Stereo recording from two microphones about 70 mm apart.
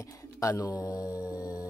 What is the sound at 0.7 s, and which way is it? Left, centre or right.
Speech, left.